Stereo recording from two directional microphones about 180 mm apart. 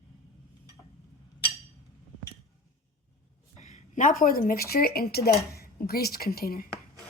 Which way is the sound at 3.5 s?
45° left (ahead or behind).